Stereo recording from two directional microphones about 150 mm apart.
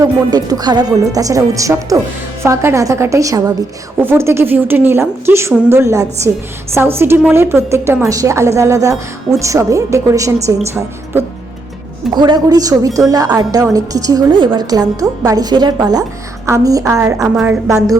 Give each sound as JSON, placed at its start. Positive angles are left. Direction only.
{"t": 0.0, "sound": "a woman's voice", "side_deg": -25}
{"t": 12.1, "sound": "a woman's voice", "side_deg": -30}
{"t": 17.2, "sound": "a woman's voice", "side_deg": 0}